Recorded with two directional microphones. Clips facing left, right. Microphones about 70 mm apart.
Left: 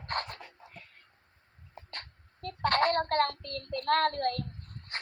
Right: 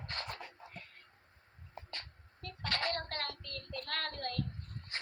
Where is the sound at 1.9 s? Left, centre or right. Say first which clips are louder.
Left 3 dB; left.